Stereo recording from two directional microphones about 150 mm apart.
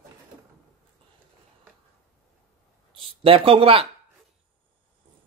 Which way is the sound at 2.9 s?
35° right (ahead or behind).